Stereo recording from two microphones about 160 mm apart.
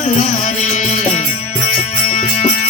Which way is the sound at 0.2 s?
50° left (ahead or behind).